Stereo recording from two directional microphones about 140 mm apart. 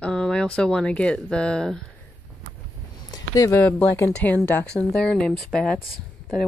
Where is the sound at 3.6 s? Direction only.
10° left (ahead or behind).